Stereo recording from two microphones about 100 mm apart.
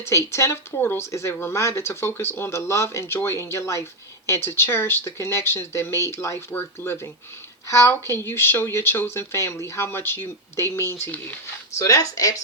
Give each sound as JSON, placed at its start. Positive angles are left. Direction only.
{"t": 0.3, "sound": "speech", "side_deg": 30}
{"t": 11.8, "sound": "speech", "side_deg": 35}